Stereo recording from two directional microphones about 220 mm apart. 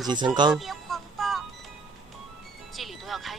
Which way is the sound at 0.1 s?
20° right (ahead or behind).